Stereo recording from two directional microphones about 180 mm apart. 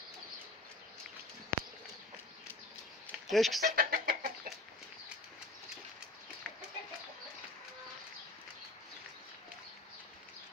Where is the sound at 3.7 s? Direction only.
55° right (ahead or behind).